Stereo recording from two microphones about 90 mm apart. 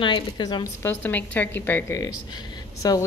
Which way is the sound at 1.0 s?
20° left (ahead or behind).